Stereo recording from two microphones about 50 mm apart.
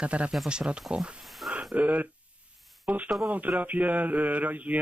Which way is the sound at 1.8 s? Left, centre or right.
Right.